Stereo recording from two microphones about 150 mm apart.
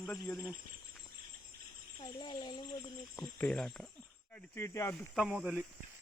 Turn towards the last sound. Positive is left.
turn(degrees=-5)  # may be behind; listen again after turning